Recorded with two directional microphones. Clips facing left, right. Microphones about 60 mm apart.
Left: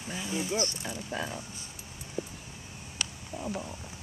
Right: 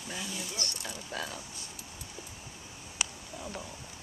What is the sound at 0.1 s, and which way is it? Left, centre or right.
Speech, left.